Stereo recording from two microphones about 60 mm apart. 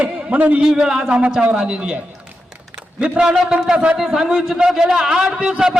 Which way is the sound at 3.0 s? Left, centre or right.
Centre.